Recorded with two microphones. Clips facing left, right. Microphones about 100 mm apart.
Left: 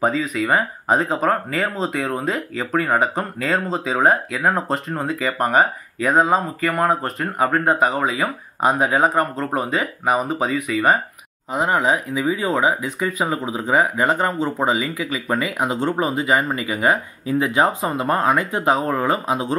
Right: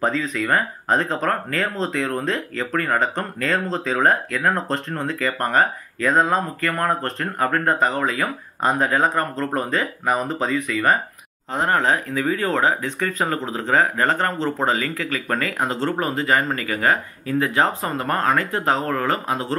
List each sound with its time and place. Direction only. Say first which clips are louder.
0.0 s speech: left 2 dB; 10° left (ahead or behind)